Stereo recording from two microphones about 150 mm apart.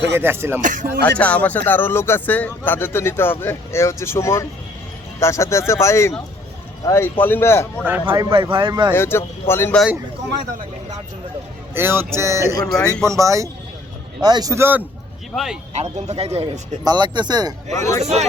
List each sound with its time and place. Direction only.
0.1 s music: 15° right (ahead or behind)
0.6 s music: 60° right (ahead or behind)
1.2 s speech: 10° left (ahead or behind)
7.9 s music: 15° right (ahead or behind)
8.1 s speech: 35° right (ahead or behind)
8.9 s speech: 15° left (ahead or behind)
11.7 s music: 15° right (ahead or behind)
13.1 s speech: 20° right (ahead or behind)
15.7 s a man's voice: 50° right (ahead or behind)
16.8 s speech: 30° right (ahead or behind)
17.7 s a man's voice: 50° right (ahead or behind)